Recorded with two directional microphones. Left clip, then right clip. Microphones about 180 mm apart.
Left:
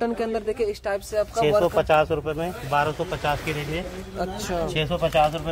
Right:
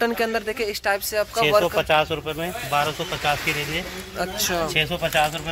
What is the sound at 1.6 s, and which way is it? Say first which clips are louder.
Speech: even; 25° left (ahead or behind).